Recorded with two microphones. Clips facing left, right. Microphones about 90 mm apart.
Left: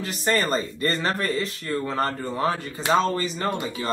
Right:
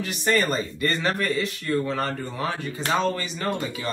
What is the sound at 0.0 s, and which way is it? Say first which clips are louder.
Speech: right 1 dB; 35° left (ahead or behind).